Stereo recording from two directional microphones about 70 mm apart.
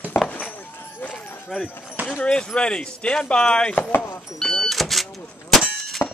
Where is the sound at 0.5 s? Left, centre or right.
Left.